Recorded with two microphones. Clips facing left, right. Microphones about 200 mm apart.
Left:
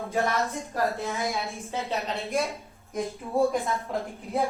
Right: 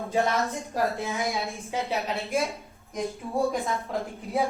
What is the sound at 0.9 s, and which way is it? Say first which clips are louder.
Speech: right 1 dB; 15° right (ahead or behind).